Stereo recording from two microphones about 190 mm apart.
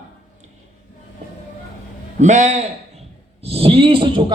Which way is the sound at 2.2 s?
40° right (ahead or behind).